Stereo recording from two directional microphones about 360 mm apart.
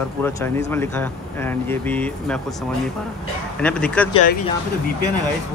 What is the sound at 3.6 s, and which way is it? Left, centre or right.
Speech, centre.